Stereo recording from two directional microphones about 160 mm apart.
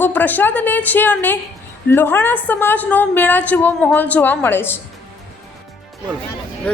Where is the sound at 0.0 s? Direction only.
10° left (ahead or behind).